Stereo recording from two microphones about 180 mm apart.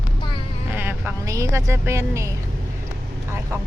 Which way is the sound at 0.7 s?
10° right (ahead or behind).